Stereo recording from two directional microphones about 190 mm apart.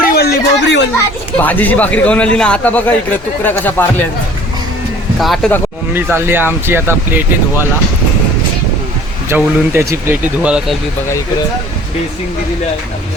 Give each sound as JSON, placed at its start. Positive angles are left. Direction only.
{"t": 0.1, "sound": "a sound", "side_deg": 55}
{"t": 1.4, "sound": "a man's voice", "side_deg": 10}
{"t": 5.2, "sound": "speech", "side_deg": 0}
{"t": 5.9, "sound": "speech", "side_deg": -10}
{"t": 9.3, "sound": "speech", "side_deg": -10}